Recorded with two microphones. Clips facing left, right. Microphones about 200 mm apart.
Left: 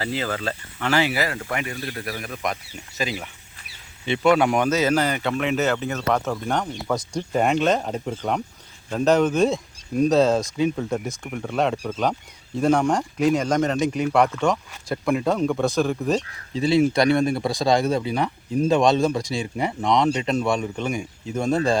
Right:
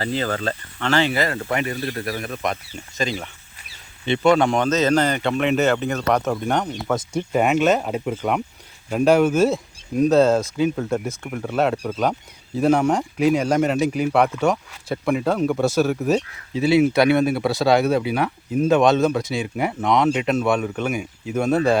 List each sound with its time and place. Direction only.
0.2 s speech: 40° right (ahead or behind)
0.4 s speech: 10° left (ahead or behind)
6.1 s speech: 20° right (ahead or behind)
7.3 s speech: 5° right (ahead or behind)